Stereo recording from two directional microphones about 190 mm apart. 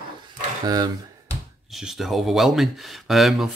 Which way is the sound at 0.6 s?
20° right (ahead or behind).